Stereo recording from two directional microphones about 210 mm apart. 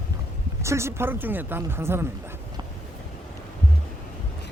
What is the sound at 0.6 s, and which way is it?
Speech, 15° right (ahead or behind).